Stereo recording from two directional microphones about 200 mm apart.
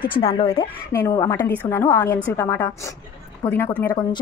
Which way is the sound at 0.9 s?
15° left (ahead or behind).